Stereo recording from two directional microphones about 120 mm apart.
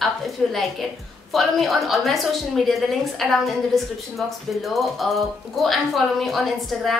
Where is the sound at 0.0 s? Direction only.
Centre (ahead or behind).